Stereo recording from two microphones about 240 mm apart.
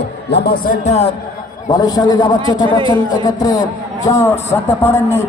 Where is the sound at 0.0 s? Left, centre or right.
Left.